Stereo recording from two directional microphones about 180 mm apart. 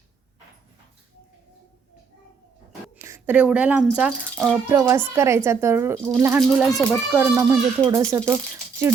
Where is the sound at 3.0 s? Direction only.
15° right (ahead or behind).